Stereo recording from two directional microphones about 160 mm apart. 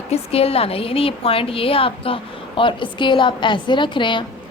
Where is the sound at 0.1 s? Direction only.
40° left (ahead or behind).